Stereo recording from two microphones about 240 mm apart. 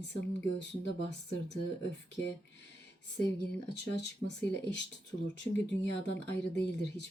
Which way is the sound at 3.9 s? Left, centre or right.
Left.